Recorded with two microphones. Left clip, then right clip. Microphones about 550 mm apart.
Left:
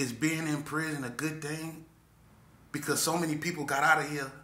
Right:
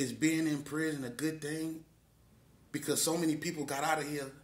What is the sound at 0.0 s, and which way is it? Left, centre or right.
A man's voice, right.